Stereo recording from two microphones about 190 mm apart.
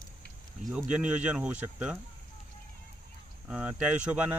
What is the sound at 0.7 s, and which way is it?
Speech, 5° right (ahead or behind).